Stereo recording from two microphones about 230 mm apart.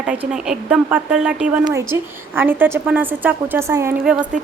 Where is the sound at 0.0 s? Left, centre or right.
Centre.